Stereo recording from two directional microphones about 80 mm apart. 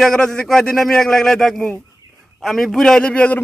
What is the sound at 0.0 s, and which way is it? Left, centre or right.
A man's voice, centre.